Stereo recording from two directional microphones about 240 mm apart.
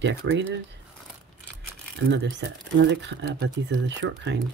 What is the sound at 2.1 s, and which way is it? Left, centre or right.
Speech, right.